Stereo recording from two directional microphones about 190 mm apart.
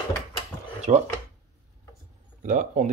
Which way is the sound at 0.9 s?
40° right (ahead or behind).